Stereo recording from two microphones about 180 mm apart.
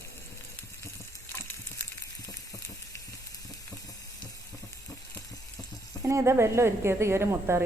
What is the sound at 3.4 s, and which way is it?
Frying, 20° left (ahead or behind).